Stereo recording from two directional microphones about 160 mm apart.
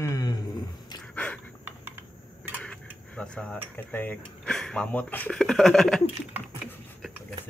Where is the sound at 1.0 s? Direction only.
10° left (ahead or behind).